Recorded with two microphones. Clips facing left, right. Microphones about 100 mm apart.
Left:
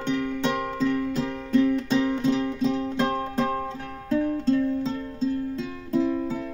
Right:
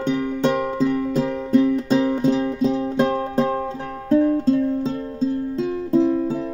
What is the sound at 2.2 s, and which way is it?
Music, 40° right (ahead or behind).